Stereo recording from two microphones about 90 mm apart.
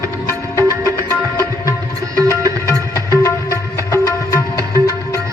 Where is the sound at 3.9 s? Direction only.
35° left (ahead or behind).